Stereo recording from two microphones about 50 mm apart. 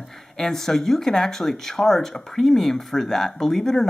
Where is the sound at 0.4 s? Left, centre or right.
Centre.